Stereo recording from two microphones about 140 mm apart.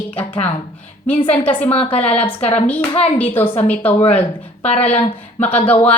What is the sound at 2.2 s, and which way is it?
Speech, 45° left (ahead or behind).